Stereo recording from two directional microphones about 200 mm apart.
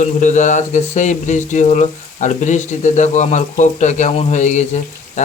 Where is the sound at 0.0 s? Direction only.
40° left (ahead or behind).